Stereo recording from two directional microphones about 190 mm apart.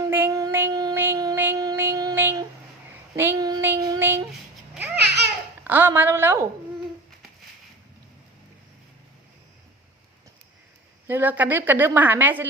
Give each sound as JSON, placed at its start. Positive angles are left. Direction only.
{"t": 0.0, "sound": "child singing", "side_deg": -15}
{"t": 3.2, "sound": "female singing", "side_deg": -15}
{"t": 5.0, "sound": "babbling", "side_deg": -60}
{"t": 5.6, "sound": "a sound", "side_deg": -10}
{"t": 11.0, "sound": "a woman's voice", "side_deg": -10}